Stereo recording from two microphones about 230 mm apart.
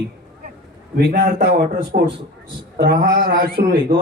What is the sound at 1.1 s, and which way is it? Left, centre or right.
A man's voice, right.